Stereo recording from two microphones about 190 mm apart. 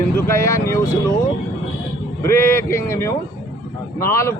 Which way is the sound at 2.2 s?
15° left (ahead or behind).